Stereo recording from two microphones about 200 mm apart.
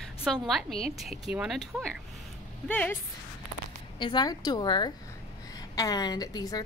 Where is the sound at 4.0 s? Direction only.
20° left (ahead or behind).